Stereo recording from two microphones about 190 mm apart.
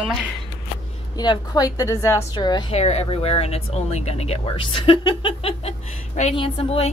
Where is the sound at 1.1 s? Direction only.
20° left (ahead or behind).